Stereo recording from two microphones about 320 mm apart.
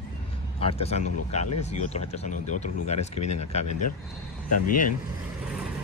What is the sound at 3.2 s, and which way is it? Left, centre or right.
Speech, left.